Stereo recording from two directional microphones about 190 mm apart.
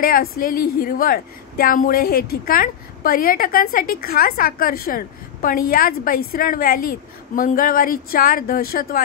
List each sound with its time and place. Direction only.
0.0 s a woman's voice: 50° left (ahead or behind)